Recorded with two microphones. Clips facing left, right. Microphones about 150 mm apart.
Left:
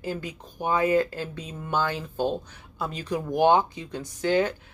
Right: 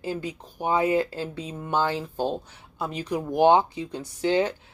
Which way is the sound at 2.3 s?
15° right (ahead or behind).